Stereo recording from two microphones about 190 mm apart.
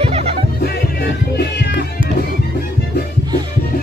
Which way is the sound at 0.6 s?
55° left (ahead or behind).